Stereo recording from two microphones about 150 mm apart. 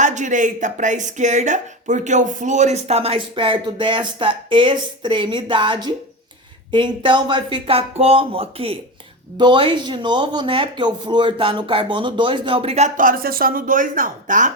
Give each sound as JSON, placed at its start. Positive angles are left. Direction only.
{"t": 0.0, "sound": "speech", "side_deg": -55}